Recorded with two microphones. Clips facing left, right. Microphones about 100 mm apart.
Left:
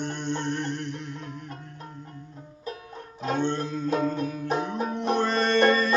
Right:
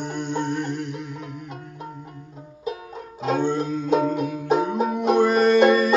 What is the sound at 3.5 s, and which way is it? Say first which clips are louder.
Music: right 5 dB; 15° right (ahead or behind).